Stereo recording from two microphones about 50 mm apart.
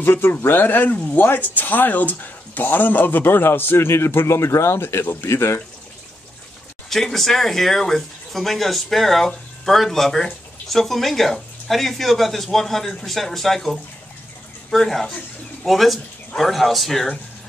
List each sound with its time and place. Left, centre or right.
0.0 s speech: left
6.9 s speech: centre